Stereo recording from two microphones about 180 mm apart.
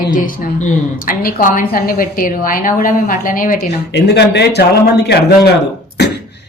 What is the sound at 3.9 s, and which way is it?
A woman's voice, 70° left (ahead or behind).